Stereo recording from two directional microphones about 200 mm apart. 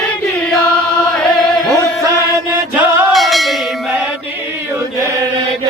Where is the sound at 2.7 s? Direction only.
10° right (ahead or behind).